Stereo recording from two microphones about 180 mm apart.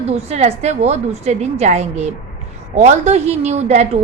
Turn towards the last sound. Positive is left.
turn(degrees=-40)  # may be behind; listen again after turning